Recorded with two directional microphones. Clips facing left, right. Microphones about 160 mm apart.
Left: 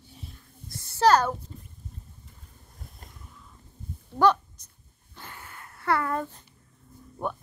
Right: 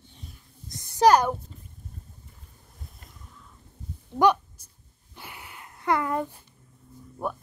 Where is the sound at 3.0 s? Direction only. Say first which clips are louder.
Left 2 dB; 40° left (ahead or behind).